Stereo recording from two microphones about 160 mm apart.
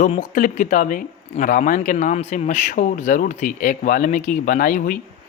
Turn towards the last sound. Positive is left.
turn(degrees=60)  # may be behind; listen again after turning